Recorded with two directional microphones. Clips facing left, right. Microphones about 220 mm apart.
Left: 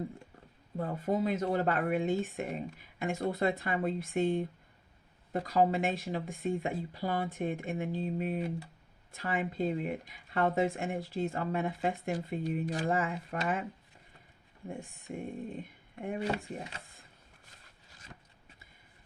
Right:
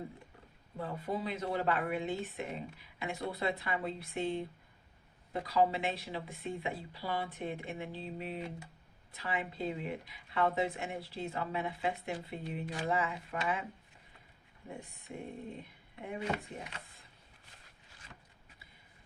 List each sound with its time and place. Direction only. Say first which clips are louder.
0.8 s speech: left 6 dB; 45° left (ahead or behind)
16.0 s speech: left 4 dB; 40° left (ahead or behind)